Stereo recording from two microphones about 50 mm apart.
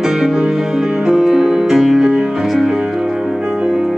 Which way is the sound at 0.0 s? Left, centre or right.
Centre.